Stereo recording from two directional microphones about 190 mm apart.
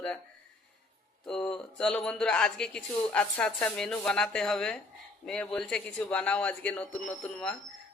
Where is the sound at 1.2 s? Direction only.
5° left (ahead or behind).